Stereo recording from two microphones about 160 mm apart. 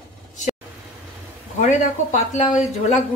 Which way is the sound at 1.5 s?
50° left (ahead or behind).